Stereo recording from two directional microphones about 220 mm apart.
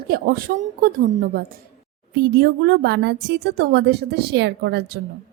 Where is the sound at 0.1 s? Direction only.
45° right (ahead or behind).